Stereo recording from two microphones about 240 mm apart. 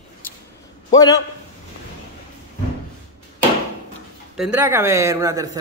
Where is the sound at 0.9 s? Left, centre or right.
Centre.